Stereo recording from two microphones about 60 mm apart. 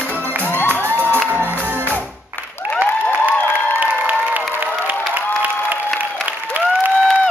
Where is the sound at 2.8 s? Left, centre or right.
Right.